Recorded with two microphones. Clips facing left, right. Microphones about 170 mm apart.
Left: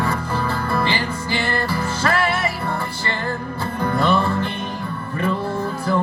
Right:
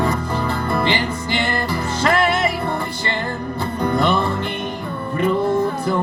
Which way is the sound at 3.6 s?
15° right (ahead or behind).